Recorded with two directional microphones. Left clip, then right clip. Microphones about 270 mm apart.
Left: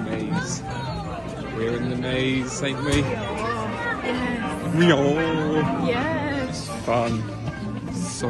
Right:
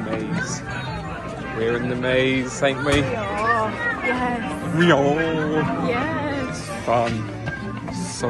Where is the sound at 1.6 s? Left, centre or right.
Centre.